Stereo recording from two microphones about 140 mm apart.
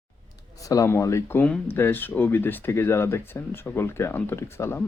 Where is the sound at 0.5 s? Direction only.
25° left (ahead or behind).